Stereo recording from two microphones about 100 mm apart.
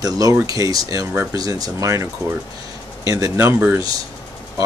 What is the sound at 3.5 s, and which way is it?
Speech, 15° right (ahead or behind).